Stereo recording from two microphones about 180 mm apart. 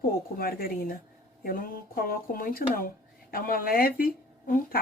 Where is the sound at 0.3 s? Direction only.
55° left (ahead or behind).